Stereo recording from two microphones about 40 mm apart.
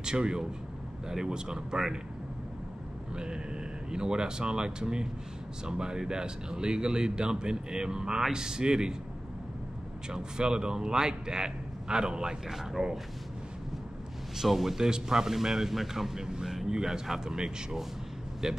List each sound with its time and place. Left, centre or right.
0.0 s speech: right
3.9 s speech: right
10.0 s speech: centre
14.3 s speech: centre
16.2 s speech: centre